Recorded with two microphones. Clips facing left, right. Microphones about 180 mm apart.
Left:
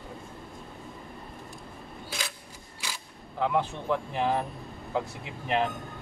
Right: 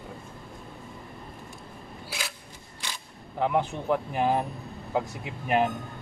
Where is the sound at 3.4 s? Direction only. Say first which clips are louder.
Right 2 dB; 15° right (ahead or behind).